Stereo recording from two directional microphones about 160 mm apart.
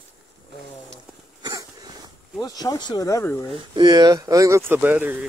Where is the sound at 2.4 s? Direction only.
25° left (ahead or behind).